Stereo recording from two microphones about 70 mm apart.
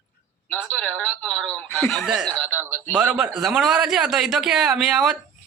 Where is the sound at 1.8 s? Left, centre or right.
Centre.